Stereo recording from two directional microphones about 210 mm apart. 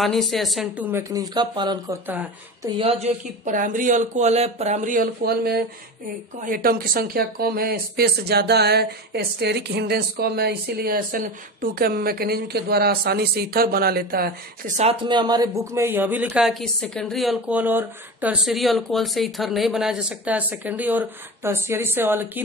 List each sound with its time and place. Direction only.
0.0 s a woman's voice: centre (ahead or behind)
1.1 s speech: 20° right (ahead or behind)
2.0 s speech: 10° right (ahead or behind)
2.8 s speech: 30° right (ahead or behind)
14.9 s speech: 20° right (ahead or behind)